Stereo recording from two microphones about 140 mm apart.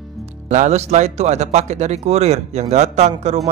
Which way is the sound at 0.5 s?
55° right (ahead or behind).